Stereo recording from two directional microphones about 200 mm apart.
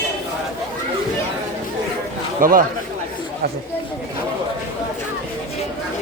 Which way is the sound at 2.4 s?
45° right (ahead or behind).